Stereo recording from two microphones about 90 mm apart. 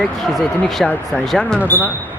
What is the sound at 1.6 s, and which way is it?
Speech, 20° left (ahead or behind).